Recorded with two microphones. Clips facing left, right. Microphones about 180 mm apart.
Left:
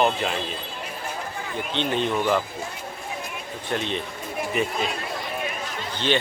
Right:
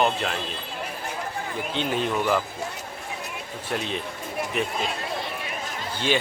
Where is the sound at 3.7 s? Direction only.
Centre (ahead or behind).